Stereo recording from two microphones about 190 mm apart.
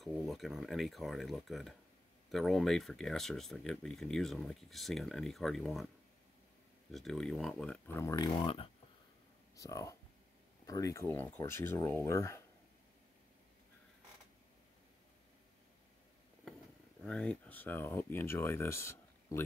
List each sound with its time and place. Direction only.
0.0 s speech: centre (ahead or behind)
6.9 s speech: centre (ahead or behind); by 8.6 s 25° left (ahead or behind)
9.6 s speech: 15° left (ahead or behind)
17.0 s speech: 5° left (ahead or behind)